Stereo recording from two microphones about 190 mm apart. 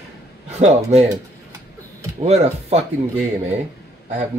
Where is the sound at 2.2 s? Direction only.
35° right (ahead or behind).